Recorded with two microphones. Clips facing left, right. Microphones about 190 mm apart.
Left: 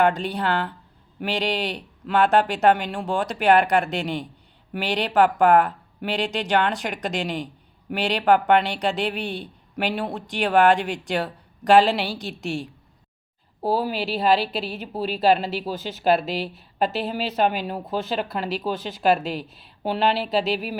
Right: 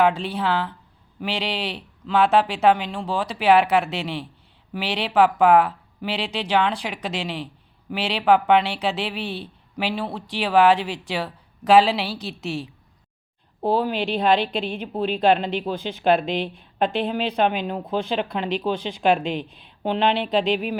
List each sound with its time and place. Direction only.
0.0 s speech: centre (ahead or behind)